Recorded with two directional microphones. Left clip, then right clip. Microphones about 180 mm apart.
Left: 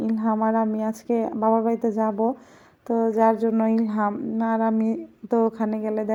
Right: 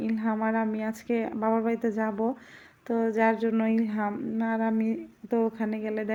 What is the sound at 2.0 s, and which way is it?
Speech, 15° right (ahead or behind).